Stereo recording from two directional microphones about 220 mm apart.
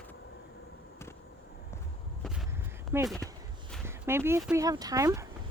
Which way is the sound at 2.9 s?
10° right (ahead or behind).